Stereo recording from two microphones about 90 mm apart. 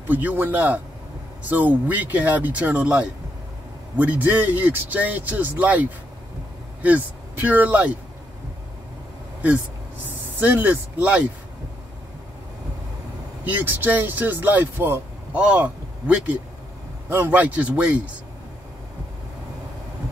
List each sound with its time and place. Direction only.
0.1 s speech: 20° right (ahead or behind)
10.4 s a man's voice: 20° right (ahead or behind)
13.4 s a man's voice: 20° right (ahead or behind)